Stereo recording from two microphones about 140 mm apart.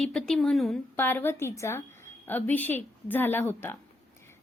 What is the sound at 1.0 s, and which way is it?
A woman's voice, 15° left (ahead or behind).